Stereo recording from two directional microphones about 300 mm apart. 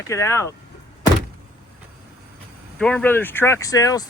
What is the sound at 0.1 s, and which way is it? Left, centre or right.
Speech, centre.